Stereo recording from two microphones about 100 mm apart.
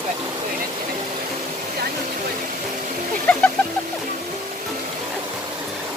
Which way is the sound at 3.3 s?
10° left (ahead or behind).